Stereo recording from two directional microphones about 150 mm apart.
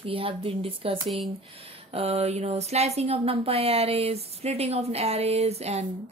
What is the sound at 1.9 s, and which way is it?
Speech, 45° right (ahead or behind).